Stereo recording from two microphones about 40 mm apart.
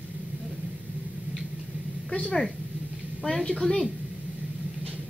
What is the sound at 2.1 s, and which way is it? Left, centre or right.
Speech, left.